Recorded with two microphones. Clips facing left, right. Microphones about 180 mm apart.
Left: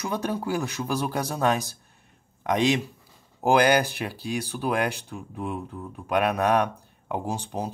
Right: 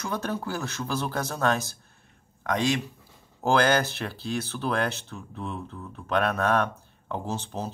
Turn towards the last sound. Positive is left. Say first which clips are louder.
# left 2 dB
turn(degrees=15)  # may be behind; listen again after turning